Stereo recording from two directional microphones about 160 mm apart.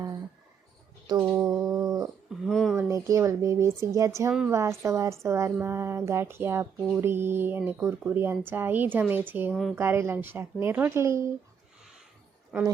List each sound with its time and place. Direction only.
1.0 s a sound: 25° right (ahead or behind)
1.7 s dog: 20° right (ahead or behind)
2.4 s a sound: centre (ahead or behind)
2.7 s speech: 20° right (ahead or behind)
9.5 s speech: centre (ahead or behind)
9.7 s speech: 15° right (ahead or behind)
12.5 s speech: 10° right (ahead or behind)